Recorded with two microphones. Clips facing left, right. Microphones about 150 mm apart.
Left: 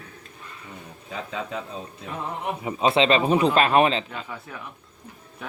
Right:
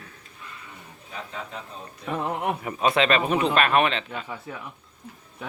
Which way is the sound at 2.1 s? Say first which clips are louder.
Right 6 dB; 75° right (ahead or behind).